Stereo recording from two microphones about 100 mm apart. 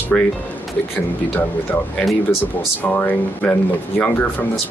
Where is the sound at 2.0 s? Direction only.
Centre (ahead or behind).